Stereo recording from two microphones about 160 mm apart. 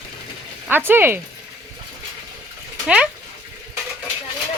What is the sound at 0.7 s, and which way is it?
Speech, 15° right (ahead or behind).